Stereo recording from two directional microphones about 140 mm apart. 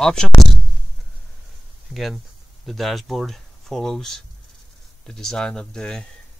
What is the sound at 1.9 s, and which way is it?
Speech, centre (ahead or behind).